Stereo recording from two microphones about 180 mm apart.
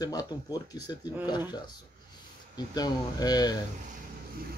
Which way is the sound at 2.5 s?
20° left (ahead or behind).